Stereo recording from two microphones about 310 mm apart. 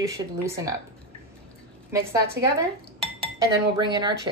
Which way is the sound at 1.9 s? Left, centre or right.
Centre.